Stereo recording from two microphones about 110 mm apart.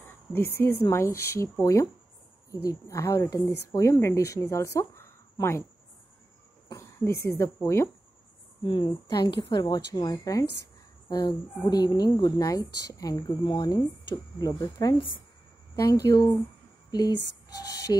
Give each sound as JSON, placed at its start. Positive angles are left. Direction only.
{"t": 0.0, "sound": "a sound", "side_deg": 20}
{"t": 0.9, "sound": "speech", "side_deg": 25}
{"t": 6.7, "sound": "speech", "side_deg": 25}
{"t": 8.6, "sound": "speech", "side_deg": 45}
{"t": 17.6, "sound": "speech", "side_deg": 35}